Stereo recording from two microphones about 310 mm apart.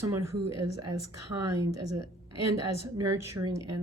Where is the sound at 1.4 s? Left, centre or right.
Right.